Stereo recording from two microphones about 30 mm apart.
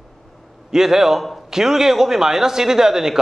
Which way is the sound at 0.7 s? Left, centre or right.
Centre.